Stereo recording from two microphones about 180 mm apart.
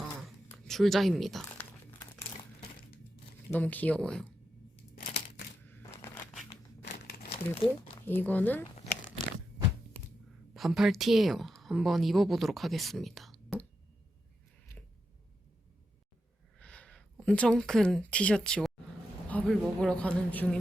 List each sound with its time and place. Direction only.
0.5 s speech: centre (ahead or behind)
3.5 s speech: 10° left (ahead or behind)
5.6 s a sound: 10° left (ahead or behind)
6.8 s crumpling: 60° left (ahead or behind)
7.5 s speech: 30° left (ahead or behind)
8.0 s speech: 10° left (ahead or behind)
10.5 s a woman's voice: centre (ahead or behind)
16.6 s speech: 5° left (ahead or behind)